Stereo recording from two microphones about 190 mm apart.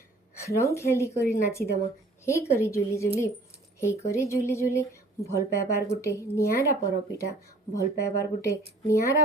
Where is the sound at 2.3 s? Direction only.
15° left (ahead or behind).